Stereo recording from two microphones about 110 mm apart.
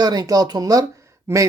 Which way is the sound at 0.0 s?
35° right (ahead or behind).